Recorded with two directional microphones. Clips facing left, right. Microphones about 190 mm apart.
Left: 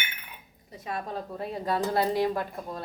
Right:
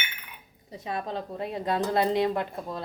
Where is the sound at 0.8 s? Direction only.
25° right (ahead or behind).